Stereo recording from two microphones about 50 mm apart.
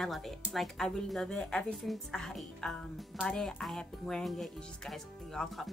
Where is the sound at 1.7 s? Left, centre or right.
Centre.